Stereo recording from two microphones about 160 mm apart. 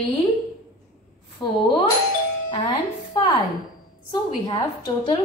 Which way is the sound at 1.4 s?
30° left (ahead or behind).